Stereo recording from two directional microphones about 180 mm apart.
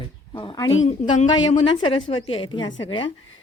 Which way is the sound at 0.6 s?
90° left.